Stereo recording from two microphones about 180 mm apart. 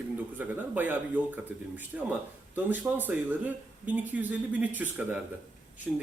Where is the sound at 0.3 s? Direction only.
10° right (ahead or behind).